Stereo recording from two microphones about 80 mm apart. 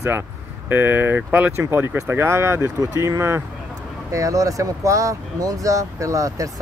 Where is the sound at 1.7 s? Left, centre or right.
Right.